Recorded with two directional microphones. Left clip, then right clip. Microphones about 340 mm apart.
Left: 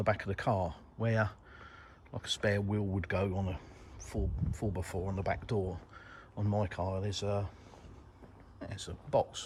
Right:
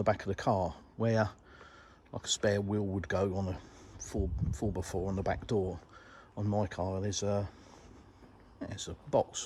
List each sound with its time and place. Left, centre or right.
0.0 s speech: centre
3.3 s speech: right
4.0 s speech: centre
8.5 s speech: centre